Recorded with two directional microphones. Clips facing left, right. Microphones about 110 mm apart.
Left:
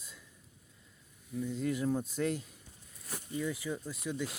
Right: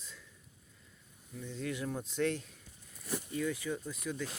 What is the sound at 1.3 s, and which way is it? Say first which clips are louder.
Speech: left 5 dB; 5° left (ahead or behind).